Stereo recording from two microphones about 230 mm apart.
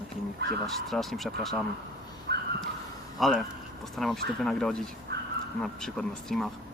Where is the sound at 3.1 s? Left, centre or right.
Centre.